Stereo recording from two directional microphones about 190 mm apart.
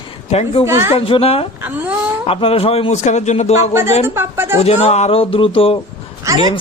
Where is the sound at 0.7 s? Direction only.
15° right (ahead or behind).